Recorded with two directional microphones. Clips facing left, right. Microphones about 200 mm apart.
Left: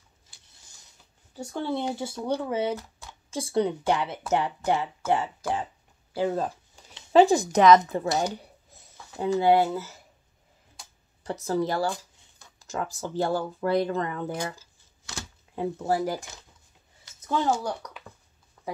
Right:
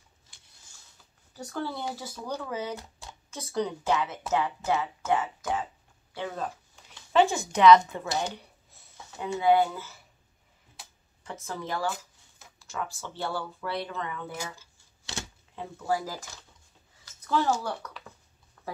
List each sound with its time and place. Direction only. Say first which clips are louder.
1.3 s speech: left 4 dB; 25° left (ahead or behind)
11.2 s speech: left 9 dB; 40° left (ahead or behind)
15.9 s speech: left 2 dB; 30° left (ahead or behind)
17.0 s speech: left 1 dB; 20° left (ahead or behind)